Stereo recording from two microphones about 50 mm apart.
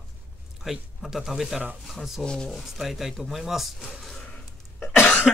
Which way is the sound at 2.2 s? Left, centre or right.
Centre.